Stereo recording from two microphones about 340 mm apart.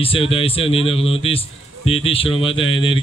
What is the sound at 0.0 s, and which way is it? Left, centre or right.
A man's voice, centre.